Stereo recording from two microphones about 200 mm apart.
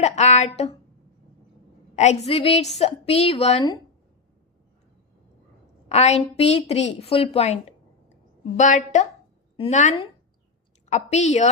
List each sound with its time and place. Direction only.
0.0 s a woman's voice: 35° left (ahead or behind)
2.0 s a woman's voice: 35° left (ahead or behind)
5.9 s a woman's voice: 35° left (ahead or behind)